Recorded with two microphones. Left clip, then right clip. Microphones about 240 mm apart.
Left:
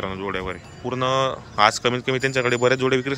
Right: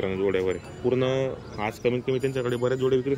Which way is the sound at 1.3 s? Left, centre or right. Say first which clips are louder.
Left 12 dB; left.